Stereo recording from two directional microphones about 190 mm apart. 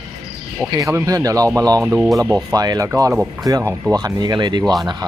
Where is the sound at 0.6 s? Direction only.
15° right (ahead or behind).